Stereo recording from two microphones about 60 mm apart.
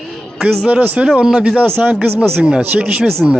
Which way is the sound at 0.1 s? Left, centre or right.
Centre.